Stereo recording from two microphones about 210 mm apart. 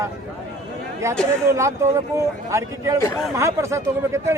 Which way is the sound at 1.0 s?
15° right (ahead or behind).